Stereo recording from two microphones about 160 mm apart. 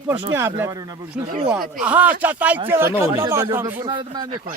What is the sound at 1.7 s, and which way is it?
Speech, 10° right (ahead or behind).